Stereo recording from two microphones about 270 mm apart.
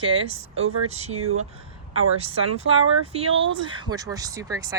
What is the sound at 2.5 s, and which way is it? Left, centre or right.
Speech, right.